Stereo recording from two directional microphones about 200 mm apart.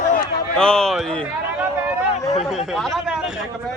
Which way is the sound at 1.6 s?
5° right (ahead or behind).